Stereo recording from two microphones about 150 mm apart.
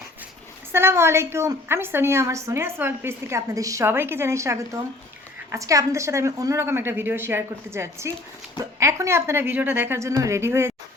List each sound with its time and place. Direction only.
0.7 s a woman's voice: 15° right (ahead or behind)